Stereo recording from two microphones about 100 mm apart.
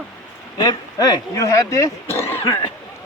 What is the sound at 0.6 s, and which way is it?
Speech, 40° left (ahead or behind).